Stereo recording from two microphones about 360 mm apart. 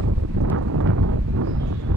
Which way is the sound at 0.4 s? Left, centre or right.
Right.